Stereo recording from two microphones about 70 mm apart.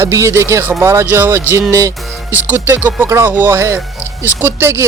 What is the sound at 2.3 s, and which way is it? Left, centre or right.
Speech, right.